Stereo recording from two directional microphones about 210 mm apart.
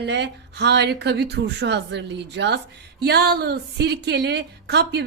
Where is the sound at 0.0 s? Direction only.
55° right (ahead or behind).